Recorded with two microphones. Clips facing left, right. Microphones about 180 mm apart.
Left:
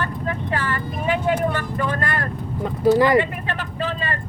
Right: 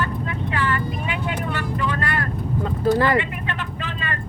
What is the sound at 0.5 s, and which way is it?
Vehicle, 40° left (ahead or behind).